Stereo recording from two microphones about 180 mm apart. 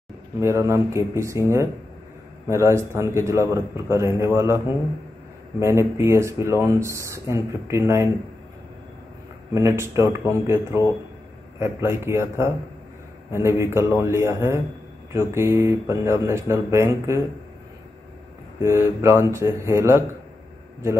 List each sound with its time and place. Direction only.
0.4 s speech: 15° right (ahead or behind)
2.4 s speech: 15° right (ahead or behind)
5.6 s speech: 15° right (ahead or behind)
9.5 s speech: 15° right (ahead or behind)
18.6 s speech: 15° right (ahead or behind)